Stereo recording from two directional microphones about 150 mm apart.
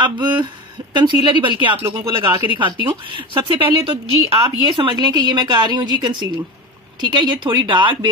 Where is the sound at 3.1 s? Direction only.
35° right (ahead or behind).